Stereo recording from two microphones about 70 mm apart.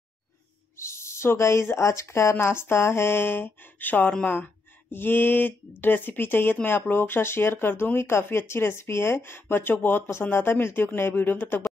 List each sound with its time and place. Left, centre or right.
0.7 s speech: left